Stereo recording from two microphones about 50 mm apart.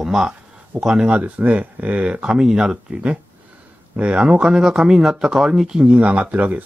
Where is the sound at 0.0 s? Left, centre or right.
Centre.